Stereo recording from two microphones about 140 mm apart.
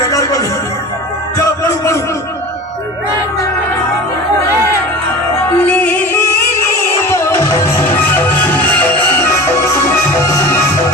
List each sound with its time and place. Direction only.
0.0 s music: 25° left (ahead or behind)
5.4 s music: 15° left (ahead or behind)
7.1 s music: 20° left (ahead or behind)